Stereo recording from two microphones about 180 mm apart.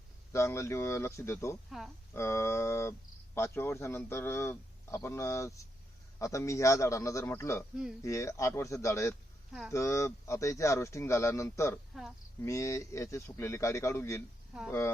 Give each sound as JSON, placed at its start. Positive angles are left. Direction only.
{"t": 0.3, "sound": "speech", "side_deg": 15}
{"t": 1.7, "sound": "speech", "side_deg": 0}
{"t": 2.1, "sound": "speech", "side_deg": 15}
{"t": 9.5, "sound": "speech", "side_deg": 0}
{"t": 9.7, "sound": "speech", "side_deg": 15}